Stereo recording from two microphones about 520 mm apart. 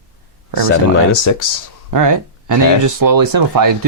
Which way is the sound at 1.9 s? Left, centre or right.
Right.